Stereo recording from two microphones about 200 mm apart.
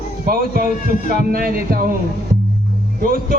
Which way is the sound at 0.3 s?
45° right (ahead or behind).